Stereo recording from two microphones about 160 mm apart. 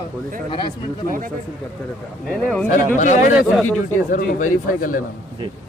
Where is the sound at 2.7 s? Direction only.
50° left (ahead or behind).